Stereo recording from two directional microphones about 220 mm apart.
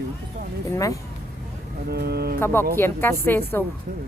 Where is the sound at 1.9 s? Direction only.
45° right (ahead or behind).